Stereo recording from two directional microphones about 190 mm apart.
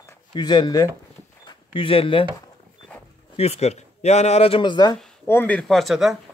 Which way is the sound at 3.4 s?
35° left (ahead or behind).